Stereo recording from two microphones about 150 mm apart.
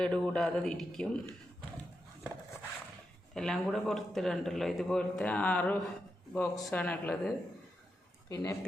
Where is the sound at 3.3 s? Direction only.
5° left (ahead or behind).